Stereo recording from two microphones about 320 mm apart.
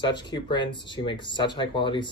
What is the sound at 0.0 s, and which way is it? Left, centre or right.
Speech, centre.